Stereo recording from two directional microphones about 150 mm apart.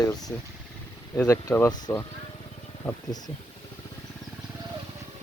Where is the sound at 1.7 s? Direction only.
25° left (ahead or behind).